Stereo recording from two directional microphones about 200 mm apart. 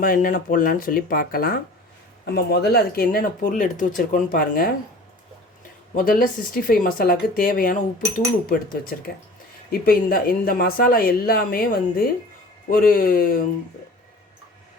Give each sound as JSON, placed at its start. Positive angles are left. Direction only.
{"t": 0.0, "sound": "speech", "side_deg": 45}
{"t": 6.0, "sound": "speech", "side_deg": 45}